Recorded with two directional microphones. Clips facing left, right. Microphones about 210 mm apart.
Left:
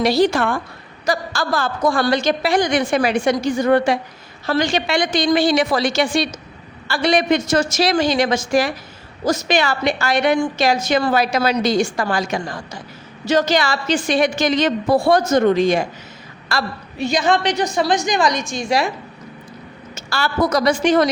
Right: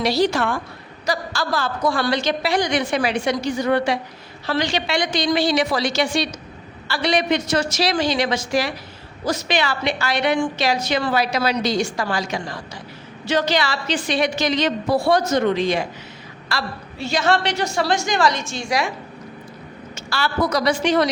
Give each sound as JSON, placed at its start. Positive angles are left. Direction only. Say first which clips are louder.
{"t": 0.0, "sound": "a woman's voice", "louder": "left 3 dB", "side_deg": 50}
{"t": 17.0, "sound": "a woman's voice", "louder": "left 2 dB", "side_deg": 15}
{"t": 20.0, "sound": "a woman's voice", "louder": "left 2 dB", "side_deg": 45}